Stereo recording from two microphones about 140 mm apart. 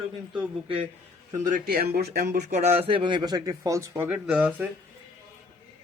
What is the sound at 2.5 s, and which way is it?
Speech, 50° right (ahead or behind).